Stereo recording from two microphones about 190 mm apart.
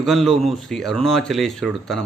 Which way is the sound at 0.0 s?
Centre (ahead or behind).